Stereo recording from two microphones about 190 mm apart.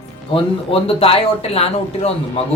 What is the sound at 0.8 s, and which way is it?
Speech, 30° left (ahead or behind).